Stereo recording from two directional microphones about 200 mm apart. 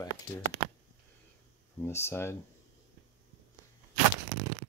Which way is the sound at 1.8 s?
10° left (ahead or behind).